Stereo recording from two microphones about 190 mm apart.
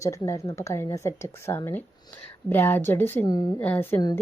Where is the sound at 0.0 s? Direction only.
15° left (ahead or behind).